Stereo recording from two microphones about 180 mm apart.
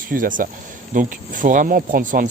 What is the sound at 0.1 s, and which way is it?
Speech, 50° right (ahead or behind).